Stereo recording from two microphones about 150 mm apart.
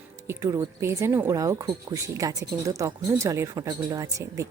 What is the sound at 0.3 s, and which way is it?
Speech, 20° right (ahead or behind).